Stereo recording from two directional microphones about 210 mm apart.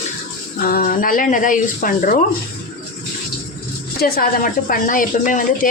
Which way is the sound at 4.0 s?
45° left (ahead or behind).